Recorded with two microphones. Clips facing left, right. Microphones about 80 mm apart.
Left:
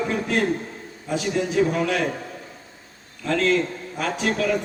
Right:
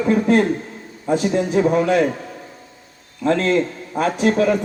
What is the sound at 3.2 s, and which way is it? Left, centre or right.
A man's voice, right.